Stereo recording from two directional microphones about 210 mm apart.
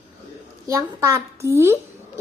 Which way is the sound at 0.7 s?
15° right (ahead or behind).